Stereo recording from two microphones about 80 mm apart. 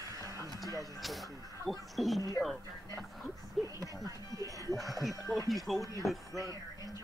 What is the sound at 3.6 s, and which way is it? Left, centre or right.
Music, right.